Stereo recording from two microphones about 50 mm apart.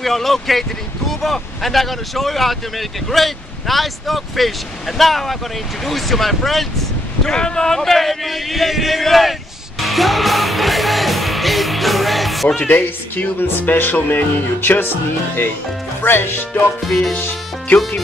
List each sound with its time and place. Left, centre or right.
0.0 s speech: centre
7.2 s a sound: centre
12.6 s speech: left
16.8 s speech: centre